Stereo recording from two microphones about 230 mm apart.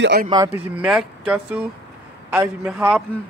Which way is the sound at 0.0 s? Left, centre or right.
Right.